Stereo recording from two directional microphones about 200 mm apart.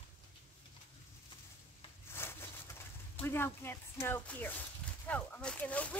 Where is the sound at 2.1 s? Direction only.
10° left (ahead or behind).